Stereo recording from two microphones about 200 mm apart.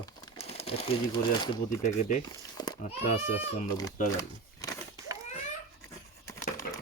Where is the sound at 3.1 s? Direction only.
35° left (ahead or behind).